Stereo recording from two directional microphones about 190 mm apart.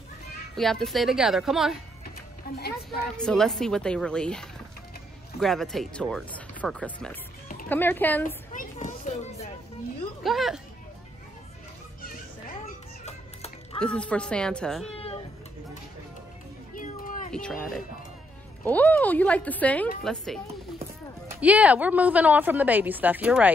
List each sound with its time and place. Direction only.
0.6 s speech: centre (ahead or behind)
2.6 s a woman's voice: 55° left (ahead or behind)
3.2 s speech: 5° left (ahead or behind)
8.5 s a sound: 40° left (ahead or behind)
10.2 s speech: centre (ahead or behind)
12.0 s children playing: 50° left (ahead or behind)
13.7 s speech: 5° left (ahead or behind)
15.0 s cat: 30° left (ahead or behind)
16.7 s a sound: 45° left (ahead or behind)
17.3 s speech: 5° left (ahead or behind)
21.3 s a woman's voice: 5° right (ahead or behind)